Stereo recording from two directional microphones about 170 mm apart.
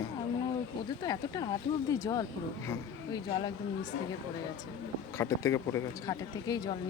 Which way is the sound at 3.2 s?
30° left (ahead or behind).